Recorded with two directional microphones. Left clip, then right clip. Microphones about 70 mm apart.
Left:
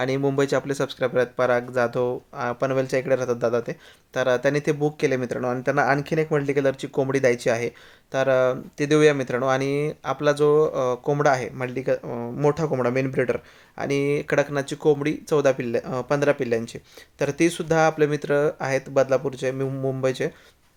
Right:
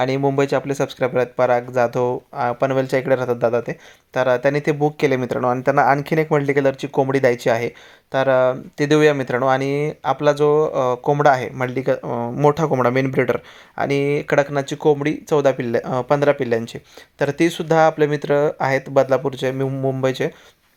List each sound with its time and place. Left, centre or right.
0.0 s speech: centre
4.9 s speech: right
6.0 s speech: right
6.7 s speech: right
7.1 s speech: right
8.1 s speech: right
11.2 s speech: right
12.5 s speech: right
12.7 s speech: right
13.7 s speech: right